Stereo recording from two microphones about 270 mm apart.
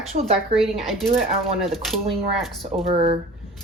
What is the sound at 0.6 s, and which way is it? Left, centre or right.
Speech, centre.